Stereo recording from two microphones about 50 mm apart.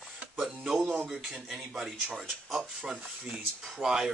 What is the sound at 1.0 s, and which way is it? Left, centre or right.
Speech, centre.